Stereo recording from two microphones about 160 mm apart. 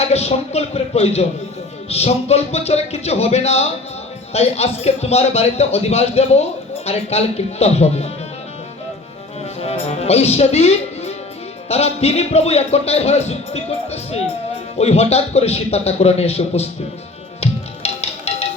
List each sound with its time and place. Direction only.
0.0 s speech: 40° left (ahead or behind)
9.4 s music: 40° left (ahead or behind)
11.7 s speech: 40° left (ahead or behind)
17.4 s music: 40° left (ahead or behind)